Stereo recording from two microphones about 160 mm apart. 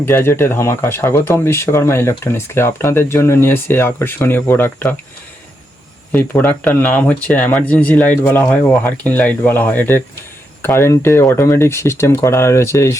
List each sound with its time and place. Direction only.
0.0 s speech: 15° left (ahead or behind)
6.1 s speech: 10° left (ahead or behind)